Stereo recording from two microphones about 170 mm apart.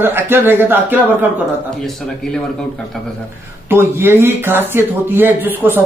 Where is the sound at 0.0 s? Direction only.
15° right (ahead or behind).